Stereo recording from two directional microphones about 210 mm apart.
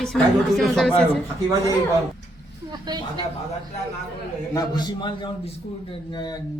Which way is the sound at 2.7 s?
20° right (ahead or behind).